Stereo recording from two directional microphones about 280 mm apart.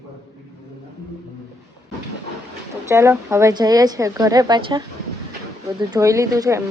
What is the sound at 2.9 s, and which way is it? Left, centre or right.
A woman's voice, centre.